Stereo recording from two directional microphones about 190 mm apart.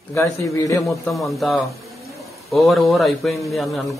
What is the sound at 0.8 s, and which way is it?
Speech, centre (ahead or behind).